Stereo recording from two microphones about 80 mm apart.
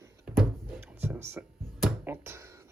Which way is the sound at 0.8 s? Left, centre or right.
Right.